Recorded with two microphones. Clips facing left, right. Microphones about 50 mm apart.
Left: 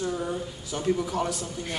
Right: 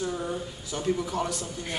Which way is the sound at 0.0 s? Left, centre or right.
Centre.